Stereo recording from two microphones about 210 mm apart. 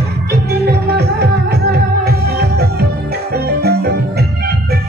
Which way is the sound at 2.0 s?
50° right (ahead or behind).